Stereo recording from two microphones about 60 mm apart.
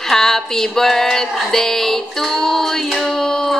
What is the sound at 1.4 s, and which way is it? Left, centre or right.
Music, centre.